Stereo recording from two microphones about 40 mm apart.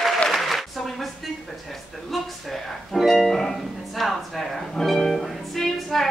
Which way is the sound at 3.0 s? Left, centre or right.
Centre.